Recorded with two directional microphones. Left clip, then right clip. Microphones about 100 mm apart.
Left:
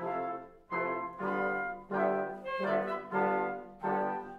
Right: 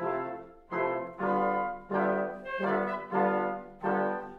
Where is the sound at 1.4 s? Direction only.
20° right (ahead or behind).